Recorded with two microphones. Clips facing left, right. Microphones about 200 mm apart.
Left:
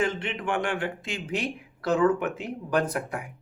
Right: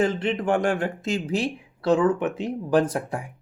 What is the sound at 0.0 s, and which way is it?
Speech, 35° right (ahead or behind).